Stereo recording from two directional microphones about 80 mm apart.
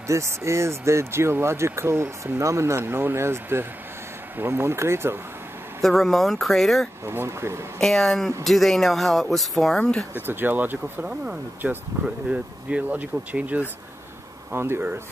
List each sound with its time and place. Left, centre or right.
0.0 s speech: right
5.8 s speech: centre
7.1 s speech: right
7.8 s speech: centre
10.2 s speech: right
14.5 s speech: right